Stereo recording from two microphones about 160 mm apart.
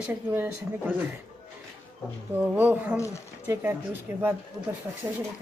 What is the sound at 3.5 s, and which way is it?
Speech, 15° right (ahead or behind).